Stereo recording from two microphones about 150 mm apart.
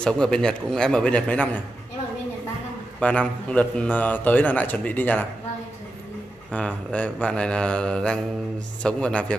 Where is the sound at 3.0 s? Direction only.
10° left (ahead or behind).